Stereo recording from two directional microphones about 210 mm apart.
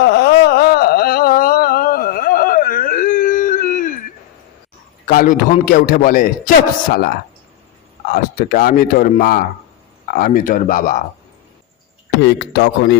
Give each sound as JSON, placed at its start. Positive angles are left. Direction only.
{"t": 0.0, "sound": "a sound", "side_deg": 50}
{"t": 5.0, "sound": "a man's voice", "side_deg": 40}
{"t": 8.1, "sound": "a man's voice", "side_deg": 45}
{"t": 12.2, "sound": "speech", "side_deg": 55}